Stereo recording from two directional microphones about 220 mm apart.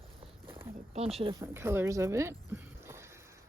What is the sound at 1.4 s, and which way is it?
Speech, 10° right (ahead or behind).